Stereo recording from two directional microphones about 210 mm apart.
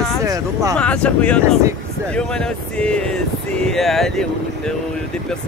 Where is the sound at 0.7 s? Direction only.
5° left (ahead or behind).